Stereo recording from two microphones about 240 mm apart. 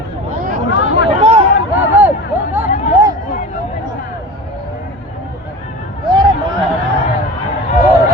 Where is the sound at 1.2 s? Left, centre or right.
Right.